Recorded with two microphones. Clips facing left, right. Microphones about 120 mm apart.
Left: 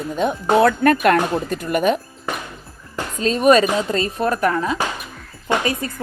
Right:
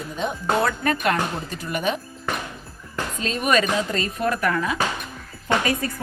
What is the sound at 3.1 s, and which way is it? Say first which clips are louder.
A woman's voice: left 8 dB; 35° left (ahead or behind).